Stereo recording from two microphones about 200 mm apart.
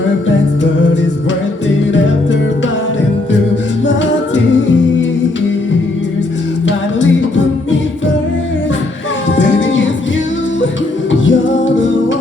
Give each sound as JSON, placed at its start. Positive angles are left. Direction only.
{"t": 9.6, "sound": "music", "side_deg": 70}
{"t": 11.1, "sound": "music", "side_deg": 70}